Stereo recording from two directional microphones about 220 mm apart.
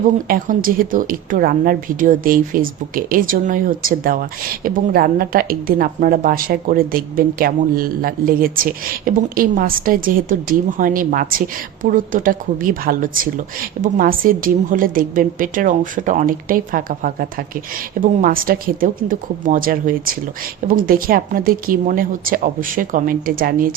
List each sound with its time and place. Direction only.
0.3 s a woman's voice: 40° right (ahead or behind)